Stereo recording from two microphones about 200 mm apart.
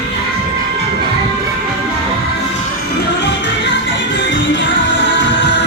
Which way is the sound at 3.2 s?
65° left (ahead or behind).